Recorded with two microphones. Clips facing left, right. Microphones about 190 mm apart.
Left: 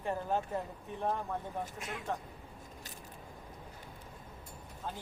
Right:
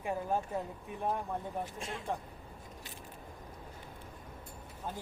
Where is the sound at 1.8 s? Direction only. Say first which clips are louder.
Right 1 dB; 30° right (ahead or behind).